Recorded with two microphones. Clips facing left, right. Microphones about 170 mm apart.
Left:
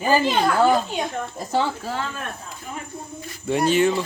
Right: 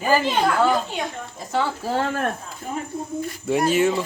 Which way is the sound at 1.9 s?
60° right (ahead or behind).